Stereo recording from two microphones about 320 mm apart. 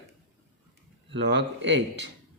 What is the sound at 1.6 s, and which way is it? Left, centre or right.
Speech, right.